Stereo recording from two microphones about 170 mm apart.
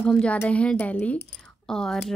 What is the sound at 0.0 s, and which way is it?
A woman's voice, 5° left (ahead or behind).